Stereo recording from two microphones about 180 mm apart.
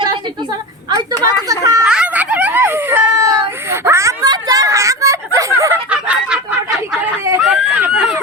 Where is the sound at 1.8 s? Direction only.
5° right (ahead or behind).